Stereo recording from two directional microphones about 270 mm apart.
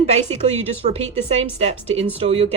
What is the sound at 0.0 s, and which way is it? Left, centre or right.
Speech, right.